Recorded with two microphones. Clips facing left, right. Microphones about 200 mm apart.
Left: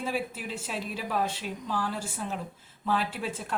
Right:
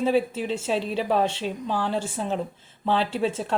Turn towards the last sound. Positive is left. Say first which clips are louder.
# right 9 dB
turn(degrees=-25)  # may be behind; listen again after turning